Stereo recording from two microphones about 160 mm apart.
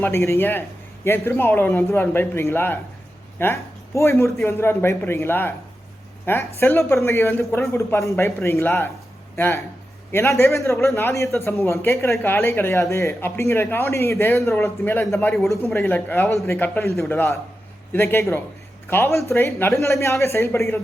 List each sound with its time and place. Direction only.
0.0 s a man's voice: 15° left (ahead or behind)